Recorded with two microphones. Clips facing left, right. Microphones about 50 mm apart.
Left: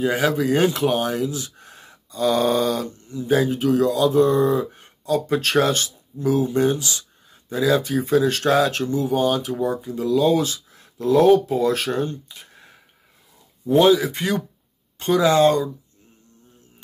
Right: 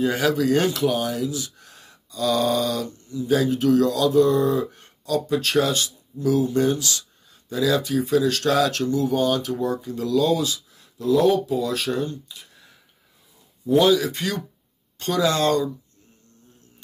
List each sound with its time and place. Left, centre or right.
0.0 s speech: centre
5.2 s speech: left
6.2 s speech: left
10.3 s speech: left; by 15.7 s centre